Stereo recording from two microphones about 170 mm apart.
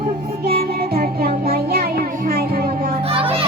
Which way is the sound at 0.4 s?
60° right (ahead or behind).